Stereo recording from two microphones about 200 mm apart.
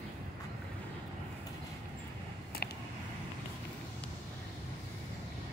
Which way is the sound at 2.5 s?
50° left (ahead or behind).